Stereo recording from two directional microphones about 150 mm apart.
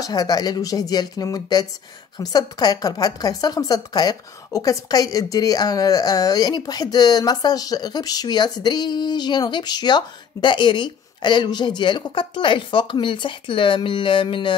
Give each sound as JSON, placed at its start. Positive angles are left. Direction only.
{"t": 0.0, "sound": "a woman's voice", "side_deg": 25}